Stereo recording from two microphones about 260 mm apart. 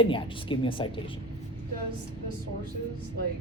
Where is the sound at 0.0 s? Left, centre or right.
Centre.